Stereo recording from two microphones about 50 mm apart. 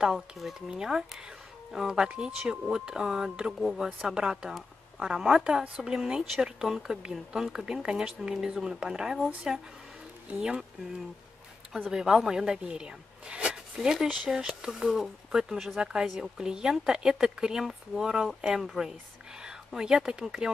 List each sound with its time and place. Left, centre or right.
0.0 s speech: centre
11.9 s speech: centre
15.8 s speech: centre
19.4 s speech: centre